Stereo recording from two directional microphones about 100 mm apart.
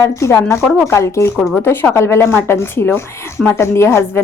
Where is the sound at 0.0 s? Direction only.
30° left (ahead or behind).